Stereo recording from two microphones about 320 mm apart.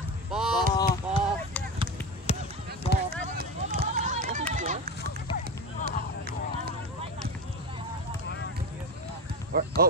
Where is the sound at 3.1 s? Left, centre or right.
Right.